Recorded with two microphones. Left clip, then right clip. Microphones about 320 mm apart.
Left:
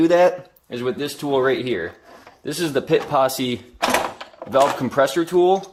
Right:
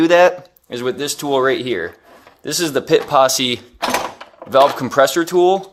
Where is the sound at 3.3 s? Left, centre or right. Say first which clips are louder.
Right 6 dB; right.